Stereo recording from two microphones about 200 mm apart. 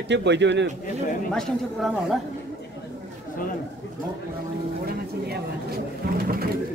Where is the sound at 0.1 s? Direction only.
60° right (ahead or behind).